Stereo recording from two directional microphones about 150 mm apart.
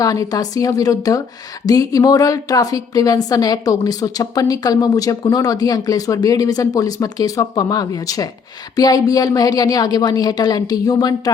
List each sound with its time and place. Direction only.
0.0 s a woman's voice: 25° left (ahead or behind)